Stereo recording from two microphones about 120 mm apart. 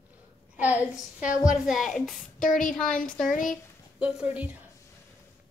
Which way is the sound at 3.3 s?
90° left.